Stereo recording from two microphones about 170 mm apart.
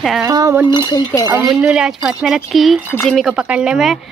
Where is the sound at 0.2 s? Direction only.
20° right (ahead or behind).